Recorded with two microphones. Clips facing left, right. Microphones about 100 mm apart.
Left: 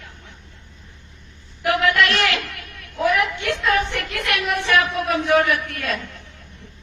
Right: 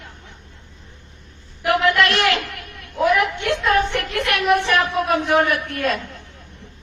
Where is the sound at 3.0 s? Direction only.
20° right (ahead or behind).